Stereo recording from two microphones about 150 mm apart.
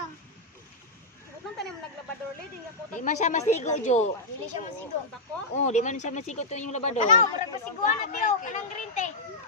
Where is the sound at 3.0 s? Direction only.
55° left (ahead or behind).